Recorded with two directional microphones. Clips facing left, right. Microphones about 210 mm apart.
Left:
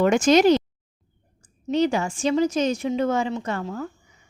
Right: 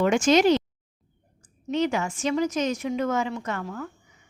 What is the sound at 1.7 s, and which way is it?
A woman's voice, 35° left (ahead or behind).